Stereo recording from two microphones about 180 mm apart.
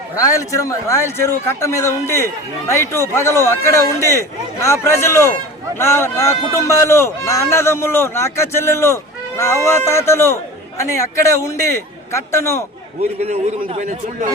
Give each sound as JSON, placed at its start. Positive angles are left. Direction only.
{"t": 0.2, "sound": "speech", "side_deg": 20}
{"t": 13.2, "sound": "a man's voice", "side_deg": -40}